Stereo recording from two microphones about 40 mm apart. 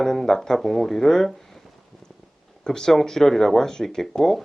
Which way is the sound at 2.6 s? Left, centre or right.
Centre.